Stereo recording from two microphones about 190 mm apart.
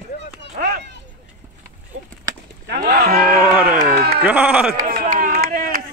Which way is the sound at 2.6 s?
55° right (ahead or behind).